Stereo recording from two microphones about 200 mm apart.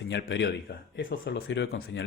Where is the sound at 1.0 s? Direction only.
50° left (ahead or behind).